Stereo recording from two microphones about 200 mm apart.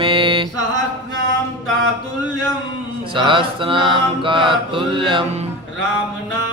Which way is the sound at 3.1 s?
25° right (ahead or behind).